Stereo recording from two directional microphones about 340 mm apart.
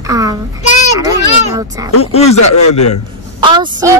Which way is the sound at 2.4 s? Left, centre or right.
Left.